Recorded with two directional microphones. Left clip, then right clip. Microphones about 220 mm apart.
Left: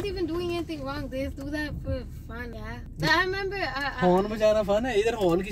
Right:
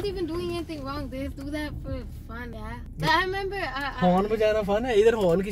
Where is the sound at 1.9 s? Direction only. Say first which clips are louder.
Left 2 dB; 5° left (ahead or behind).